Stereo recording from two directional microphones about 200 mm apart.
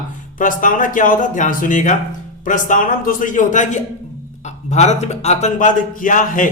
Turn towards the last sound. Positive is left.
turn(degrees=40)  # may be behind; listen again after turning